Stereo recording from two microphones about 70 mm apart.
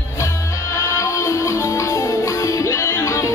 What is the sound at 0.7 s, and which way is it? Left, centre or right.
Music, left.